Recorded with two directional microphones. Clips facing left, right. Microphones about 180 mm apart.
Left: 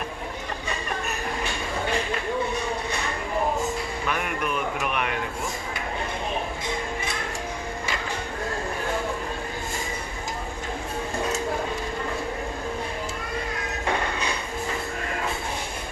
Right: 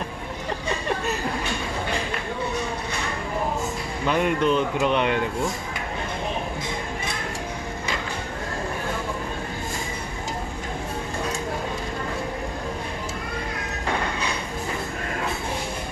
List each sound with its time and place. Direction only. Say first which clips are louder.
4.0 s speech: right 9 dB; 25° right (ahead or behind)